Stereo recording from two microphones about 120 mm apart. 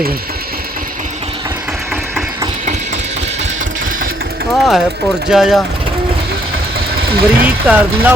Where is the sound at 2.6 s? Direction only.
80° right.